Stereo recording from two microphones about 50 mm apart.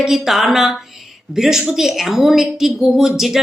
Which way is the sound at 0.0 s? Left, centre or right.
Centre.